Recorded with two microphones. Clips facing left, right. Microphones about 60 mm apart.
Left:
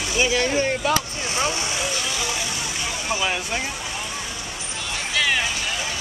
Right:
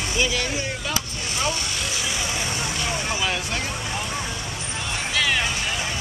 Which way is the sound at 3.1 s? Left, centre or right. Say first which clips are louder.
Left 4 dB; centre.